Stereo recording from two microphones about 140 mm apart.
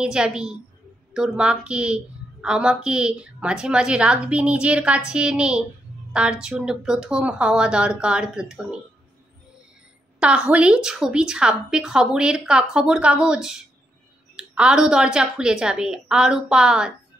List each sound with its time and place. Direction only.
0.0 s a woman's voice: 5° right (ahead or behind)
10.2 s a woman's voice: 5° right (ahead or behind)